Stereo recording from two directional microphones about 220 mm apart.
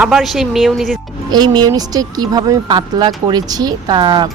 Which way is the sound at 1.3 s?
20° right (ahead or behind).